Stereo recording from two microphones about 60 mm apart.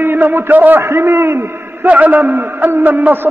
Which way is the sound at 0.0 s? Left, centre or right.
Right.